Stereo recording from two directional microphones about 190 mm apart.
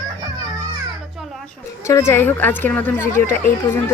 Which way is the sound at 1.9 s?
15° left (ahead or behind).